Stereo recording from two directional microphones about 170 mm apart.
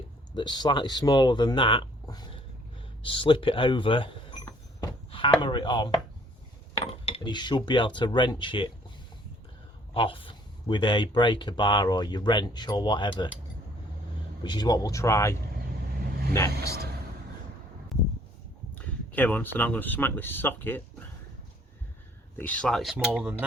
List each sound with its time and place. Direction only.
0.3 s speech: 25° left (ahead or behind)
9.9 s speech: 30° left (ahead or behind)
14.4 s speech: 25° left (ahead or behind)
18.7 s speech: 10° left (ahead or behind)
22.4 s speech: 10° left (ahead or behind); by 23.5 s 5° right (ahead or behind)